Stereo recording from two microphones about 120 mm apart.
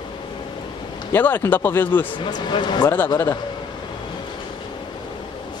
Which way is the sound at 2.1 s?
40° left (ahead or behind).